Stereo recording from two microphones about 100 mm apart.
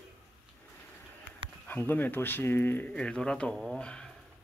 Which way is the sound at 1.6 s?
20° left (ahead or behind).